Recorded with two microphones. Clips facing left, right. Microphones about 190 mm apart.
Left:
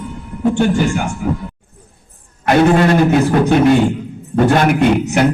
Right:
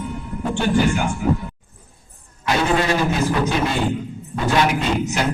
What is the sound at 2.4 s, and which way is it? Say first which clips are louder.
A man's voice: left 8 dB; 55° left (ahead or behind).